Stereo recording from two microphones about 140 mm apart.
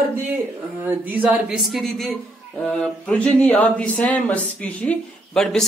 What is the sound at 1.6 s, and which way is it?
Speech, centre (ahead or behind).